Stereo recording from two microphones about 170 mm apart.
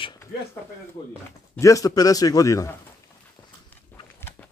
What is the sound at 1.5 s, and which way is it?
Speech, 20° left (ahead or behind).